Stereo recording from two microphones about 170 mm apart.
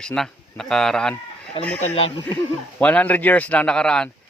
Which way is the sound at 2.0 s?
35° left (ahead or behind).